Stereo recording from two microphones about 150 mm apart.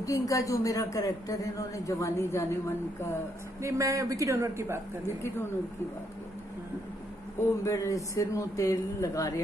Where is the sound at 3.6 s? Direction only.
20° right (ahead or behind).